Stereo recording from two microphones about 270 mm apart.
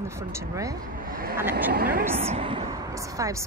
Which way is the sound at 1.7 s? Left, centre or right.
Right.